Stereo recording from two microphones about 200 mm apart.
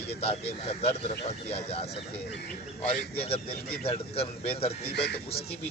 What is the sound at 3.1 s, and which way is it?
Speech, 30° left (ahead or behind).